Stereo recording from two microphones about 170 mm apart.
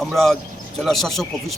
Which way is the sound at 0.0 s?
Centre (ahead or behind).